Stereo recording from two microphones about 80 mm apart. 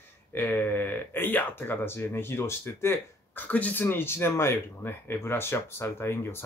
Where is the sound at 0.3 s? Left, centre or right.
Left.